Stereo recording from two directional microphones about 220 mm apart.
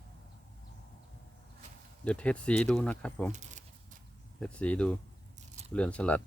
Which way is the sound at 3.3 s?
35° right (ahead or behind).